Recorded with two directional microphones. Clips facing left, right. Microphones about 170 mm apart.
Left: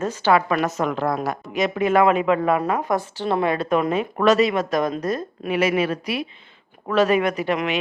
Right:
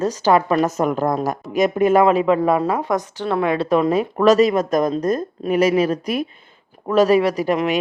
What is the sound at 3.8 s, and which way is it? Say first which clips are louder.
Speech: right 4 dB; 35° right (ahead or behind).